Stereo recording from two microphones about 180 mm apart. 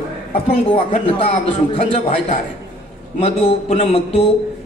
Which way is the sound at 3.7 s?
35° left (ahead or behind).